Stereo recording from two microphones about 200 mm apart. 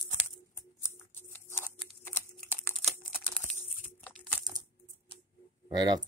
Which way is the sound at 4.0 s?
Centre (ahead or behind).